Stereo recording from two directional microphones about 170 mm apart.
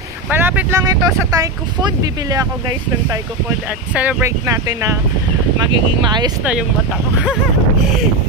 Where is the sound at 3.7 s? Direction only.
10° right (ahead or behind); by 6.3 s 25° right (ahead or behind).